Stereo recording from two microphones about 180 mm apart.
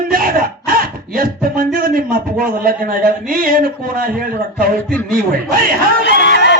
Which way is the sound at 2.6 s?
50° right (ahead or behind).